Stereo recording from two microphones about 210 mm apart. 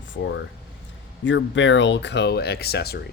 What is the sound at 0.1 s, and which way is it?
Speech, 60° left (ahead or behind).